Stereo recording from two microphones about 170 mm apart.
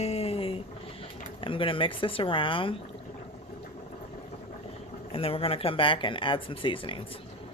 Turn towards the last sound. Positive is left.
turn(degrees=30)  # may be behind; listen again after turning